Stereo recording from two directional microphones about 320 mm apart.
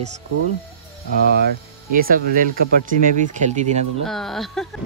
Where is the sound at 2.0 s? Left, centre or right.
Right.